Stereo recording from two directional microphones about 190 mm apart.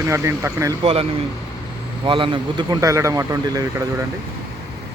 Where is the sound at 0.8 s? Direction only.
30° right (ahead or behind).